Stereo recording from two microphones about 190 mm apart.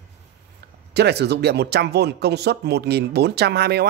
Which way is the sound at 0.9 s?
60° right (ahead or behind).